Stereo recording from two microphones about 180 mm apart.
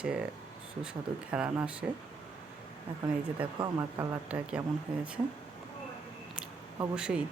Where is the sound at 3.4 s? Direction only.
25° right (ahead or behind).